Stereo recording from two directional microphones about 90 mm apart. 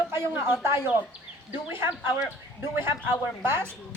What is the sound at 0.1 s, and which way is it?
Speech, 25° right (ahead or behind).